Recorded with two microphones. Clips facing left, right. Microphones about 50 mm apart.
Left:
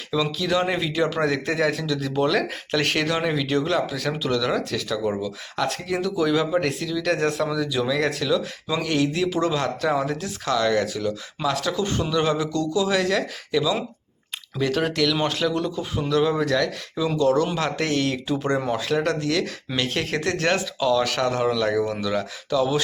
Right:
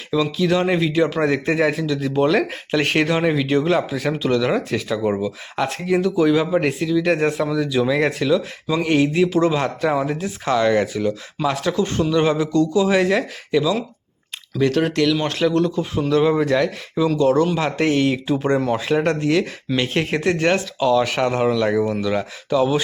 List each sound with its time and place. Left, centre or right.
0.1 s a man's voice: centre
7.9 s a man's voice: right
11.7 s speech: centre
12.1 s a man's voice: centre
14.6 s a man's voice: centre
18.7 s a man's voice: right